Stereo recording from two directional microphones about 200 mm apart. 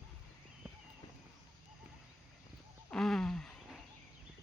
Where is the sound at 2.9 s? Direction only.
Centre (ahead or behind).